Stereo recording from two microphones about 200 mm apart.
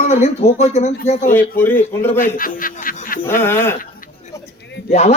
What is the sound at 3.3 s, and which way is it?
Speech, 10° left (ahead or behind).